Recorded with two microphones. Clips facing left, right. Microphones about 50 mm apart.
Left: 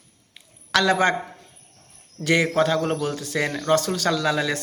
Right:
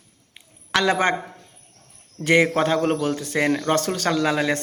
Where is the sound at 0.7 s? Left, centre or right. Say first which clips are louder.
Even; right.